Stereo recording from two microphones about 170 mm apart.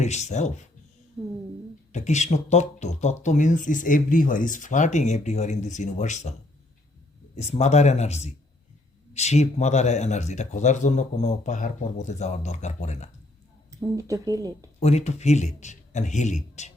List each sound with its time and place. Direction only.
0.0 s speech: 40° left (ahead or behind)
1.9 s speech: 45° left (ahead or behind)
7.3 s speech: 40° left (ahead or behind)
13.7 s speech: 20° right (ahead or behind)
14.8 s speech: 40° left (ahead or behind)